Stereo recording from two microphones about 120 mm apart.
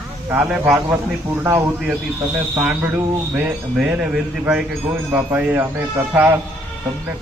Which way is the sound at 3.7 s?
5° right (ahead or behind).